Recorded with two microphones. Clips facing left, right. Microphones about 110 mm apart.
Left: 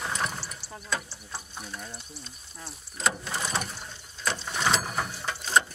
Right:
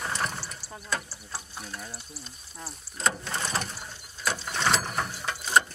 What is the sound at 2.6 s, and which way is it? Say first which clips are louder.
Mechanisms: even; centre (ahead or behind).